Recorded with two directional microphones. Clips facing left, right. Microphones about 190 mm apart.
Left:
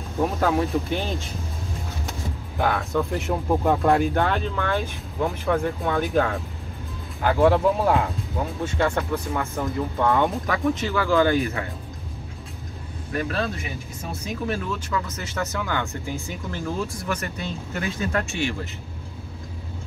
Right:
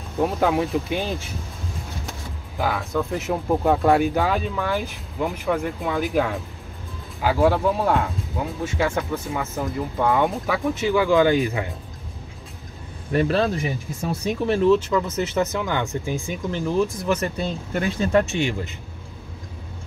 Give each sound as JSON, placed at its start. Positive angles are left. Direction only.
{"t": 0.2, "sound": "speech", "side_deg": -10}
{"t": 2.6, "sound": "speech", "side_deg": 0}
{"t": 13.1, "sound": "speech", "side_deg": -30}
{"t": 14.5, "sound": "speech", "side_deg": -30}